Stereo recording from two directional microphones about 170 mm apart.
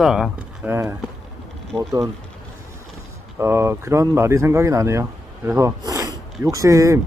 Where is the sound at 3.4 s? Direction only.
15° right (ahead or behind).